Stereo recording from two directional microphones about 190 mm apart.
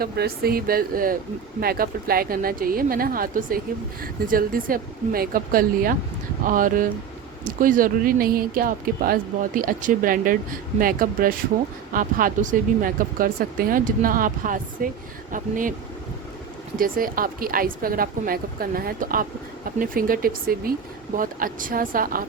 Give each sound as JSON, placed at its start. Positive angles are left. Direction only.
{"t": 0.0, "sound": "speech", "side_deg": -55}
{"t": 16.7, "sound": "speech", "side_deg": -50}